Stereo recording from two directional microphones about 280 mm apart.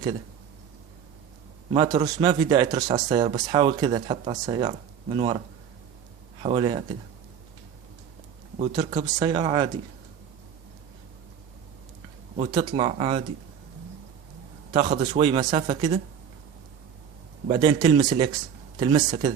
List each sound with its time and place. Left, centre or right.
1.7 s speech: centre
6.4 s speech: centre
8.5 s speech: centre
12.4 s speech: centre
14.7 s speech: centre
17.5 s speech: centre